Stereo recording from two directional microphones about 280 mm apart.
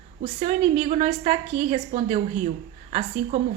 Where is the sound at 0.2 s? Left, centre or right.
Right.